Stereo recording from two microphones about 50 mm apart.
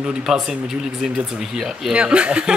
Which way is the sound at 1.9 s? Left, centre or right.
Right.